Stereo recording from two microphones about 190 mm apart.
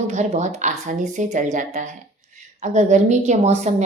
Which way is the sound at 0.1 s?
40° right (ahead or behind).